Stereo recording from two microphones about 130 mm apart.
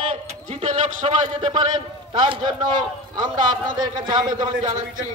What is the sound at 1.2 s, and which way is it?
Speech, 40° right (ahead or behind).